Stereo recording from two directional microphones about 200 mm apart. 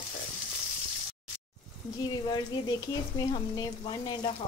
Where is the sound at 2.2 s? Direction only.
20° left (ahead or behind).